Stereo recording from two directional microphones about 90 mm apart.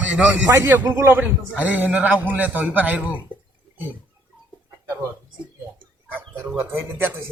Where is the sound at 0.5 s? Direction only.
30° right (ahead or behind).